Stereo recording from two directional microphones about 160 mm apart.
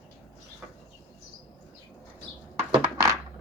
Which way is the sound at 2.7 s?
20° right (ahead or behind).